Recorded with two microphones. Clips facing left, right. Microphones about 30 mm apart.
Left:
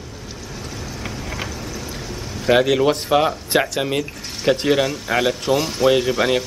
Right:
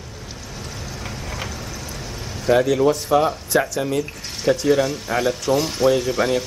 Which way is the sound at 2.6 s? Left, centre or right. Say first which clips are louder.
Left 1 dB; centre.